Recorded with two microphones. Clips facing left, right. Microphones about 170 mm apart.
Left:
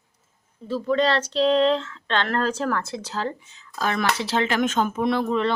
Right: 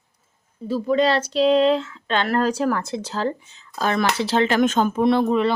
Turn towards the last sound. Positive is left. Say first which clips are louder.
# right 3 dB
turn(degrees=-10)  # may be behind; listen again after turning